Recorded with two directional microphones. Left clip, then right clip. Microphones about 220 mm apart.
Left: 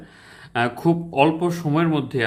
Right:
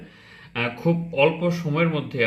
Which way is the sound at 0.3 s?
65° left (ahead or behind).